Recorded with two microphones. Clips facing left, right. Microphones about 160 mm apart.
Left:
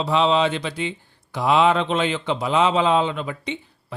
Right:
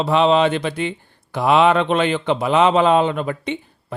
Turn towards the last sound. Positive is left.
turn(degrees=-55)  # may be behind; listen again after turning